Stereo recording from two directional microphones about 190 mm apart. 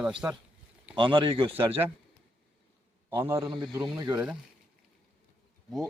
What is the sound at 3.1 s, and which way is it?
A man's voice, 10° right (ahead or behind).